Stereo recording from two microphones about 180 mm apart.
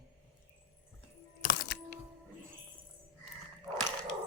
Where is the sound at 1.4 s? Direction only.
60° left (ahead or behind).